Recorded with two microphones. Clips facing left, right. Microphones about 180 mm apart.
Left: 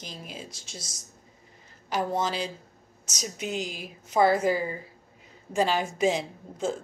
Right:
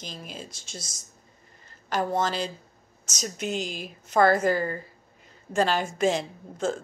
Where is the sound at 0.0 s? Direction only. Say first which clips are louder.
Right 1 dB; 10° left (ahead or behind).